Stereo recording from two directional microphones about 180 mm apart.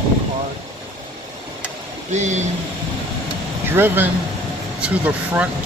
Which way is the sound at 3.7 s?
10° right (ahead or behind).